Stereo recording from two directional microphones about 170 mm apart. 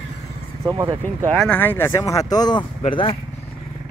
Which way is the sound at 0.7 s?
20° right (ahead or behind).